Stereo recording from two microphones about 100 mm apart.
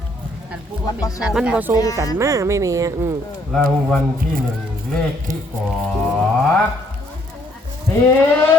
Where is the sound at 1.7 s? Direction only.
35° left (ahead or behind).